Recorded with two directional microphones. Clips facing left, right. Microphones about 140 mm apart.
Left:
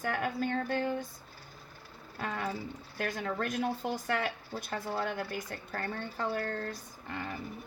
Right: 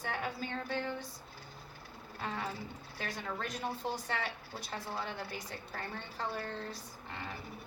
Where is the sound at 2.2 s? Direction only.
50° left (ahead or behind).